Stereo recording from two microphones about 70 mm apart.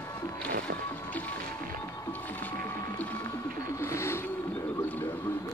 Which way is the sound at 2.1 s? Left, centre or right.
Left.